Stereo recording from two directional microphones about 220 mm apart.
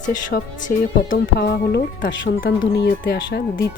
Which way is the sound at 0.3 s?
35° left (ahead or behind).